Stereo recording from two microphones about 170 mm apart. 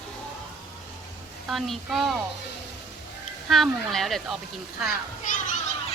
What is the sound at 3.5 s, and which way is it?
Speech, centre (ahead or behind).